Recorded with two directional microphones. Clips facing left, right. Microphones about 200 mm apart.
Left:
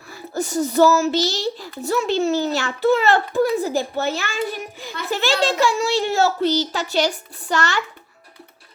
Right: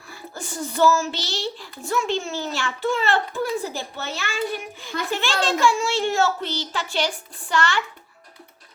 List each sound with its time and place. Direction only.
0.1 s a child's voice: 40° left (ahead or behind)